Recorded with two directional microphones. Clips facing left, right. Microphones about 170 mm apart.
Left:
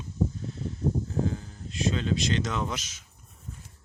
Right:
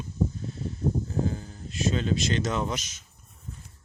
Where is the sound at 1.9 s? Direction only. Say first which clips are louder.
Right 2 dB; 45° right (ahead or behind).